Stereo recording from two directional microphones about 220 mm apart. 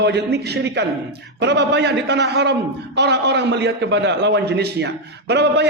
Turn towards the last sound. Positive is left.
turn(degrees=-50)  # may be behind; listen again after turning